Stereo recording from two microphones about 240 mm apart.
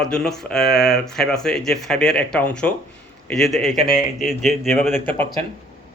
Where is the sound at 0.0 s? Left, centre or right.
Centre.